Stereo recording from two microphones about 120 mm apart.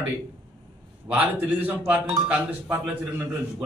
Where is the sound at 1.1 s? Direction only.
15° right (ahead or behind).